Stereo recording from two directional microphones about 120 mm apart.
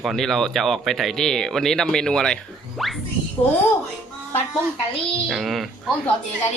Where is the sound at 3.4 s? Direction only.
35° left (ahead or behind).